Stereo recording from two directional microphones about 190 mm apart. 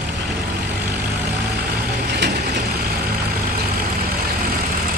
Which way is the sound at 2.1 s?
65° right (ahead or behind).